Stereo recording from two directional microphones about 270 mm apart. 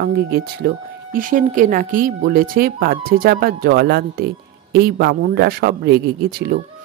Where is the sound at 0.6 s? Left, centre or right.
Right.